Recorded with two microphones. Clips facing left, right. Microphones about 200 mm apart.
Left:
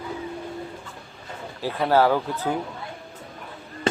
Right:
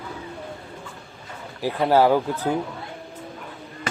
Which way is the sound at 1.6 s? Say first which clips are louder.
Right 2 dB; 15° right (ahead or behind).